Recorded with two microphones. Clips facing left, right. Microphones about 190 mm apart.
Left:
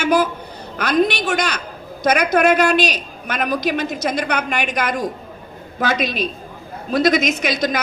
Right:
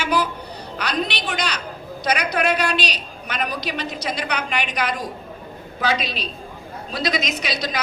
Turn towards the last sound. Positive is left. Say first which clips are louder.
# left 6 dB
turn(degrees=50)  # may be behind; listen again after turning